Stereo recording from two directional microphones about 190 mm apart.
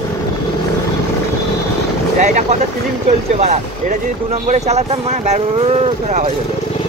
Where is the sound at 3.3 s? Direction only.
35° right (ahead or behind).